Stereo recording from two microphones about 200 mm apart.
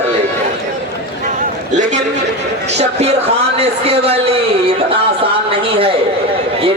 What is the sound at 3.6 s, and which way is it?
Speech, 30° right (ahead or behind).